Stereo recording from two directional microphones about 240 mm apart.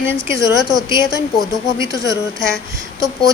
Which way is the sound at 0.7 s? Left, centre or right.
Centre.